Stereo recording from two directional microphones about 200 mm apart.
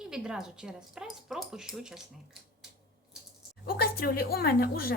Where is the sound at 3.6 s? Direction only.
50° left (ahead or behind).